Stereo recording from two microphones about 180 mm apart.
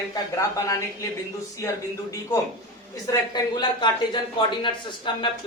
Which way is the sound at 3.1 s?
25° left (ahead or behind).